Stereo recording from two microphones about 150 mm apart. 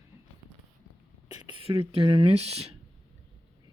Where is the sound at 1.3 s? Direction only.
30° right (ahead or behind).